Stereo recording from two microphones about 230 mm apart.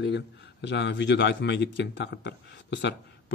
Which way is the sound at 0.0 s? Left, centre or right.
Left.